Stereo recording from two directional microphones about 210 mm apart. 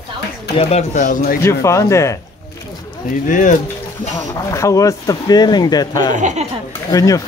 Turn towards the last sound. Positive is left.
turn(degrees=15)  # may be behind; listen again after turning